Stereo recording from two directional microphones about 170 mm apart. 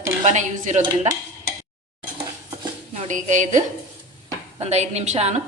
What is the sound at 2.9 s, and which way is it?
Speech, 45° right (ahead or behind).